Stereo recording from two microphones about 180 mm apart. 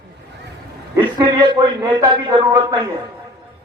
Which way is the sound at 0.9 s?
25° right (ahead or behind).